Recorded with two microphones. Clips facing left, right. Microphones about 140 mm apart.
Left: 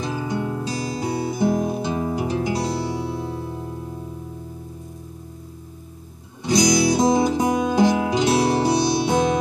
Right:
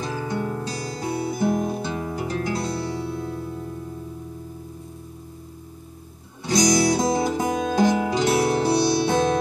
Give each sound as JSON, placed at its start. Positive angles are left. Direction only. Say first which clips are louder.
{"t": 0.0, "sound": "music", "louder": "left 2 dB", "side_deg": 15}
{"t": 6.4, "sound": "music", "louder": "left 1 dB", "side_deg": 15}